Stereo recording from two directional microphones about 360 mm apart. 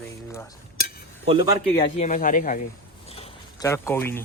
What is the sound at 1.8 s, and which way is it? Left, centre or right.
Speech, centre.